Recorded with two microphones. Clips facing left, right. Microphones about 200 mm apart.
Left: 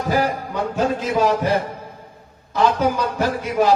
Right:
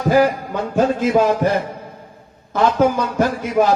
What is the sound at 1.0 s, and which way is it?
Speech, 55° right (ahead or behind).